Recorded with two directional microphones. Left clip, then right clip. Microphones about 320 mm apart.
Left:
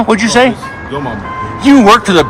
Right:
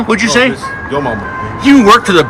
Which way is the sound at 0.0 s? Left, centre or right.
Left.